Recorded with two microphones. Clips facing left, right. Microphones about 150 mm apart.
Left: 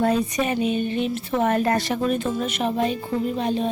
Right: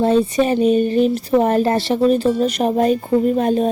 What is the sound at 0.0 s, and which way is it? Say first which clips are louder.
A woman's voice: right 6 dB; 30° right (ahead or behind).